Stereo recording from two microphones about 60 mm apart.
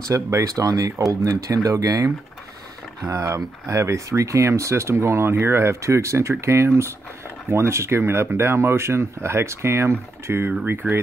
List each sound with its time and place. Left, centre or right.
0.1 s speech: right
3.1 s speech: right